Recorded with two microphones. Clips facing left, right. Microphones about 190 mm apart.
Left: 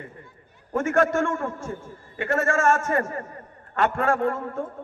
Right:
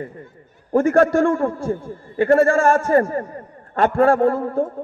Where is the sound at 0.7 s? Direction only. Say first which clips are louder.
Right 7 dB; 35° right (ahead or behind).